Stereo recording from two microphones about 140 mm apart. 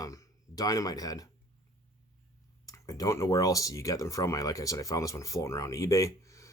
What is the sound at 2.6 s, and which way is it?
Speech, 25° left (ahead or behind).